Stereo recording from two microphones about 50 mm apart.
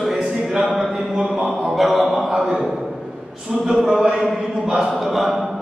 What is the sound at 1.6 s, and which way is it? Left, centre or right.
Speech, centre.